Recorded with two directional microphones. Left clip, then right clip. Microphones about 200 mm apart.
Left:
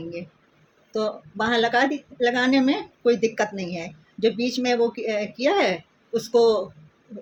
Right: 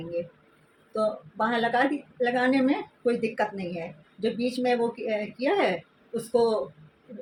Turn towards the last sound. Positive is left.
turn(degrees=40)  # may be behind; listen again after turning